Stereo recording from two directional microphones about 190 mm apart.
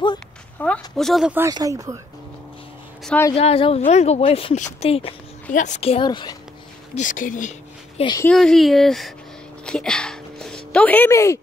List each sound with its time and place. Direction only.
0.6 s speech: 5° left (ahead or behind)
1.5 s speech: 20° right (ahead or behind)
3.1 s a woman's voice: 15° left (ahead or behind)
3.3 s speech: 30° left (ahead or behind)
7.0 s speech: 45° left (ahead or behind)
8.0 s speech: 20° left (ahead or behind)
8.3 s speech: centre (ahead or behind)